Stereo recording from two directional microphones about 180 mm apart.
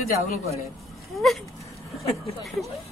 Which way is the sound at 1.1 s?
Centre (ahead or behind).